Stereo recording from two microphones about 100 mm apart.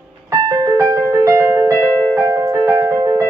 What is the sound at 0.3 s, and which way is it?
Music, 35° right (ahead or behind).